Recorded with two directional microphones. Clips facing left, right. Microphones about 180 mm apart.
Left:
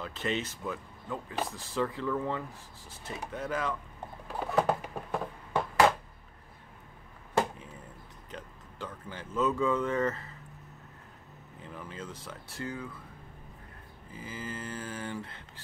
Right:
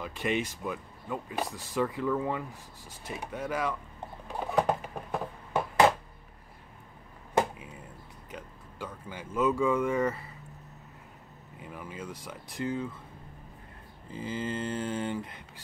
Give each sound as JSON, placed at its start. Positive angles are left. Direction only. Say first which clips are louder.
{"t": 0.0, "sound": "speech", "louder": "right 3 dB", "side_deg": -15}
{"t": 4.3, "sound": "pigeon", "louder": "even", "side_deg": -10}
{"t": 4.6, "sound": "a sound", "louder": "even", "side_deg": 0}
{"t": 5.5, "sound": "a sound", "louder": "right 1 dB", "side_deg": -20}
{"t": 7.3, "sound": "a sound", "louder": "right 2 dB", "side_deg": -10}
{"t": 8.3, "sound": "speech", "louder": "right 1 dB", "side_deg": -10}
{"t": 11.6, "sound": "speech", "louder": "right 2 dB", "side_deg": -10}
{"t": 14.1, "sound": "mantra", "louder": "right 7 dB", "side_deg": -30}
{"t": 15.1, "sound": "speech", "louder": "right 3 dB", "side_deg": -15}